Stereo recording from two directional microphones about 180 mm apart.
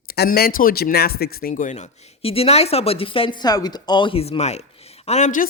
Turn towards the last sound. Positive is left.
turn(degrees=45)  # may be behind; listen again after turning